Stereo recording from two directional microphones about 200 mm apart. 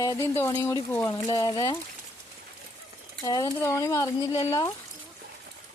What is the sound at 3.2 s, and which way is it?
Speech, 20° left (ahead or behind).